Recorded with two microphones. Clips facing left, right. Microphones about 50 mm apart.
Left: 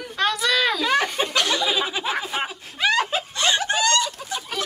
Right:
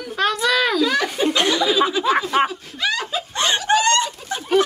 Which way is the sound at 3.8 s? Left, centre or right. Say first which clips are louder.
Right 3 dB; right.